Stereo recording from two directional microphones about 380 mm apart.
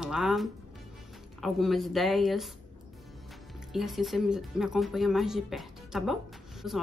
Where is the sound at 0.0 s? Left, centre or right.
Centre.